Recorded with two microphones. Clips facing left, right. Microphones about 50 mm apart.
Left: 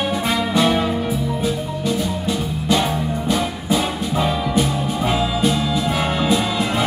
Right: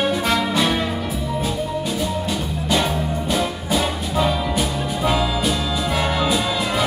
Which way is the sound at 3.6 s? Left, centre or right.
Centre.